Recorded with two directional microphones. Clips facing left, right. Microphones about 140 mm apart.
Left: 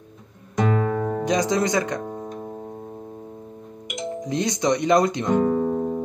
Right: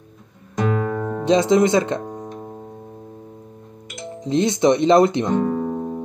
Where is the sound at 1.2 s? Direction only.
25° right (ahead or behind).